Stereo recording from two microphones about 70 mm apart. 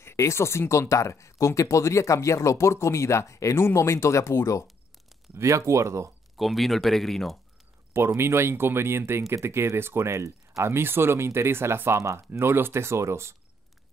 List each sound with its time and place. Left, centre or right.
0.0 s speech: left
5.3 s speech: right
6.3 s speech: centre
7.9 s speech: right
10.7 s speech: right